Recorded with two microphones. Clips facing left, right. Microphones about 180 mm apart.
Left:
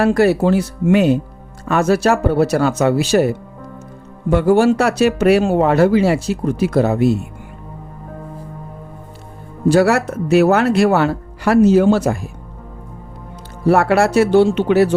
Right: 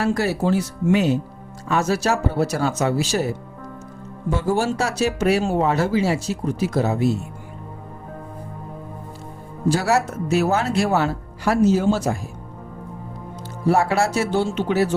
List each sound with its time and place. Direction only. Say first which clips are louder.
0.0 s speech: left 7 dB; 60° left (ahead or behind)
9.6 s speech: left 6 dB; 60° left (ahead or behind)
13.7 s speech: left 5 dB; 65° left (ahead or behind)